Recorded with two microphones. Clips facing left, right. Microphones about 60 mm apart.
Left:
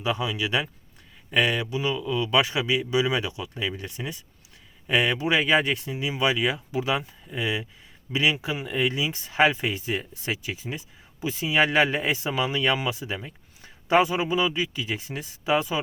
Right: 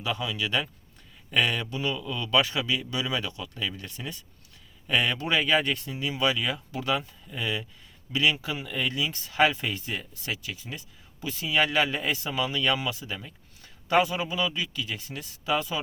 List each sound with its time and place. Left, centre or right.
0.0 s speech: centre